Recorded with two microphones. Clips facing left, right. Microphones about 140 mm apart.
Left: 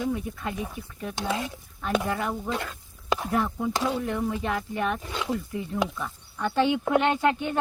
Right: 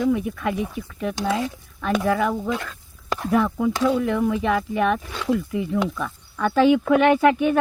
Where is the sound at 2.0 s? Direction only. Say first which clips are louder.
Right 7 dB; 90° right.